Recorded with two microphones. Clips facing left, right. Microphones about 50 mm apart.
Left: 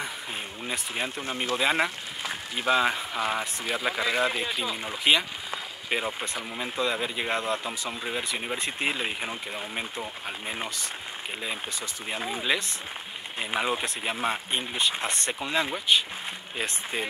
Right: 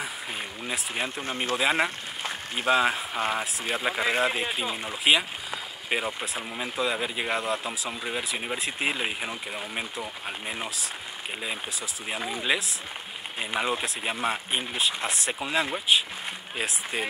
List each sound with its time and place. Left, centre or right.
0.7 s speech: centre
1.2 s speech: right
1.6 s speech: centre
2.2 s a sound: right
2.8 s speech: centre
3.2 s speech: right
4.8 s speech: centre
13.6 s speech: centre